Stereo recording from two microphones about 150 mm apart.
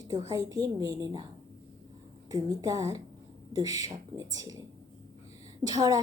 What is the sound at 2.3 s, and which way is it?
A woman's voice, 20° right (ahead or behind).